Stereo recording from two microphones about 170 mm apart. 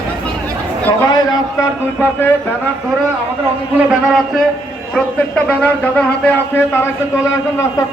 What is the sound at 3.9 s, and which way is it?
A man's voice, centre (ahead or behind).